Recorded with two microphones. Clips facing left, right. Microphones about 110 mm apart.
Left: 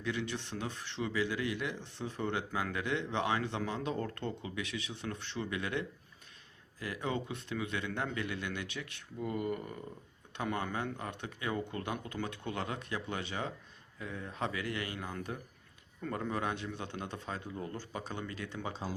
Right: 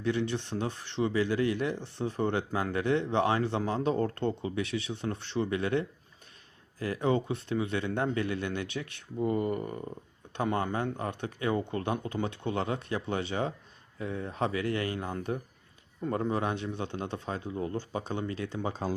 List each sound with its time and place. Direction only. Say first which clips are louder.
0.0 s speech: right 7 dB; 35° right (ahead or behind)
18.7 s speech: right 7 dB; 55° right (ahead or behind)